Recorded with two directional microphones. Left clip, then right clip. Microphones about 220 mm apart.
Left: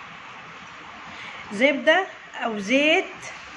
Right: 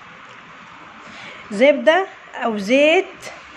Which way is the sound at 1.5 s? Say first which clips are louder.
Right 5 dB; 40° right (ahead or behind).